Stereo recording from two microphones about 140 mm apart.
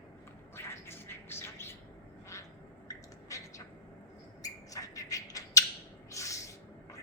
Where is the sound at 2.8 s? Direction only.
20° left (ahead or behind).